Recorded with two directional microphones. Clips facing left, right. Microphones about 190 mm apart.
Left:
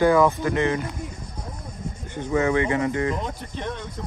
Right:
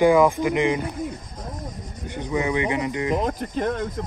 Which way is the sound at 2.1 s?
15° right (ahead or behind).